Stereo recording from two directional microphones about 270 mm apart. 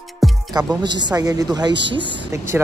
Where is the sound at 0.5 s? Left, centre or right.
Centre.